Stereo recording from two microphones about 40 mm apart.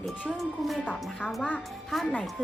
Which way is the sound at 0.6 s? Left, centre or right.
Centre.